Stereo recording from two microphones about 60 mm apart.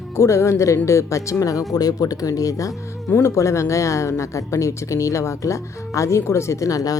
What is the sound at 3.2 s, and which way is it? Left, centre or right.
Speech, left.